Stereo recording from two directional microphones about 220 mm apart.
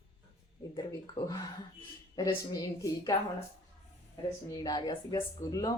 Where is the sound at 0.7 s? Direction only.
20° left (ahead or behind).